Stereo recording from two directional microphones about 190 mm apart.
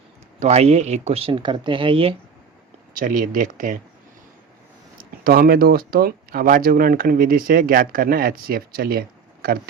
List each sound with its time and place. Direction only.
0.3 s speech: 35° right (ahead or behind)
2.9 s speech: 45° right (ahead or behind)
5.2 s speech: 50° right (ahead or behind)